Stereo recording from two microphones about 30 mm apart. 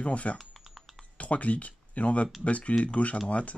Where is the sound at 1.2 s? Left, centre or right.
Left.